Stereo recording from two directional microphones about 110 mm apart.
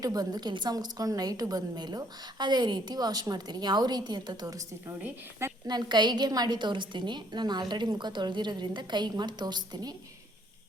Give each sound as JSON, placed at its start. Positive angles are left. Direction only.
{"t": 0.0, "sound": "a woman's voice", "side_deg": -35}
{"t": 5.6, "sound": "a woman's voice", "side_deg": -40}